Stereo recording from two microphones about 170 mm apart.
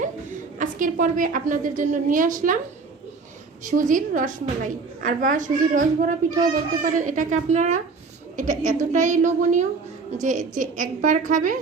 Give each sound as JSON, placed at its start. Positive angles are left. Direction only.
{"t": 0.6, "sound": "a child's voice", "side_deg": -50}
{"t": 3.6, "sound": "a child's voice", "side_deg": -50}